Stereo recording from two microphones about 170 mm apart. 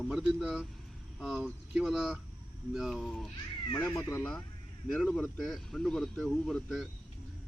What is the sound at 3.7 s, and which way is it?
Speech, 15° left (ahead or behind).